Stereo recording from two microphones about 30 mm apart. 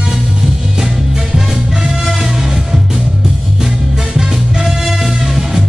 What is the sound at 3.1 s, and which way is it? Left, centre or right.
Music, right.